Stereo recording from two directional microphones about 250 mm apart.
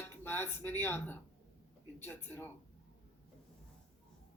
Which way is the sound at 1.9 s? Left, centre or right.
Centre.